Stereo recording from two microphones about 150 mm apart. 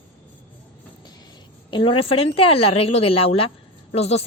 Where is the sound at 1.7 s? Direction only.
35° left (ahead or behind).